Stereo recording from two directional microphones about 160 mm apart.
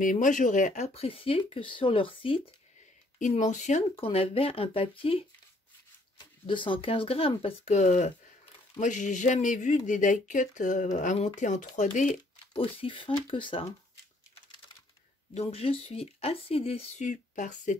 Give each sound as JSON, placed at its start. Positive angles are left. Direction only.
{"t": 0.0, "sound": "speech", "side_deg": 55}
{"t": 3.2, "sound": "speech", "side_deg": 50}
{"t": 12.5, "sound": "speech", "side_deg": 35}
{"t": 15.3, "sound": "speech", "side_deg": 40}